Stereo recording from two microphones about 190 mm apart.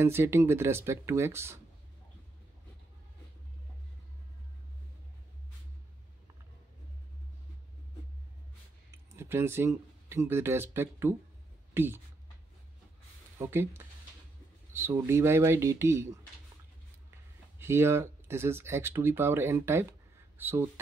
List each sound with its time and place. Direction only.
0.0 s speech: 15° right (ahead or behind)
9.1 s speech: 15° right (ahead or behind)
13.4 s speech: 15° right (ahead or behind)
17.6 s speech: 15° right (ahead or behind)